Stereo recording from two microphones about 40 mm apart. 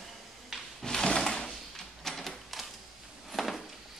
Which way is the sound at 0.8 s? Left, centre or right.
Centre.